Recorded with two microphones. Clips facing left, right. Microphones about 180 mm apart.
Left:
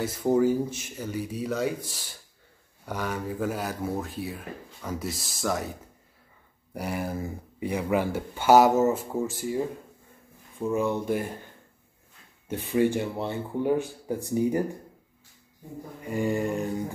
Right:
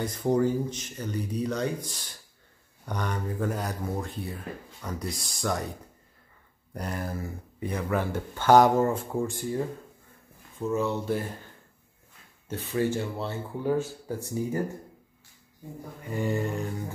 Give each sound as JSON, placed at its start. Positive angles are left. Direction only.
{"t": 0.0, "sound": "speech", "side_deg": 5}
{"t": 6.7, "sound": "speech", "side_deg": 10}
{"t": 10.6, "sound": "speech", "side_deg": 15}
{"t": 12.4, "sound": "speech", "side_deg": 15}
{"t": 16.1, "sound": "speech", "side_deg": 15}